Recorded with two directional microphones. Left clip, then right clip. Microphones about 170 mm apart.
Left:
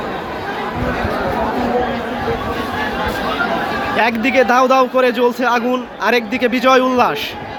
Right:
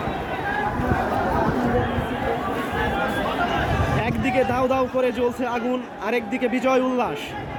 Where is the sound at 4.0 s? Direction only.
5° left (ahead or behind).